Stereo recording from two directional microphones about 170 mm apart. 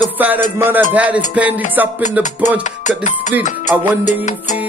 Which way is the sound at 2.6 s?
45° left (ahead or behind).